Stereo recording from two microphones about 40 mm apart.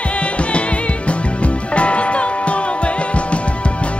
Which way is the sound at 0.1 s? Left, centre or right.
Left.